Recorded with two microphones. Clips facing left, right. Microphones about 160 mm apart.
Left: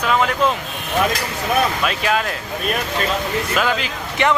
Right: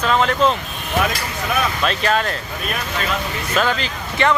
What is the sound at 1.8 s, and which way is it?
Speech, 5° left (ahead or behind).